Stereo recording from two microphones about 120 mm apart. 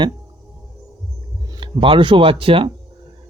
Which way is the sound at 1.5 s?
45° right (ahead or behind).